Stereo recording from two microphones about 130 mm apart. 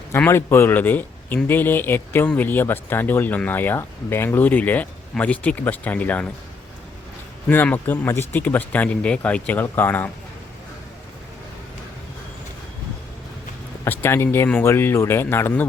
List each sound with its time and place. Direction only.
0.3 s speech: 20° left (ahead or behind)
7.4 s speech: 10° left (ahead or behind)
13.8 s speech: 15° left (ahead or behind)